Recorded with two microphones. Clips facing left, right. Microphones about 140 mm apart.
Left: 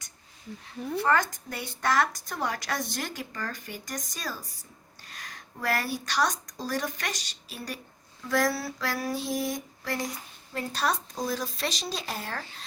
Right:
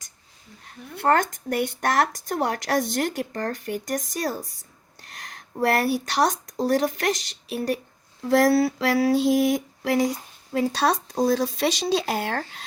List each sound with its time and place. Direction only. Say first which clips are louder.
1.0 s speech: right 6 dB; 60° right (ahead or behind)
5.6 s speech: right 8 dB; 65° right (ahead or behind)
8.2 s a sound: right 9 dB; 65° right (ahead or behind)
10.5 s speech: right 7 dB; 90° right; by 12.6 s 75° right (ahead or behind)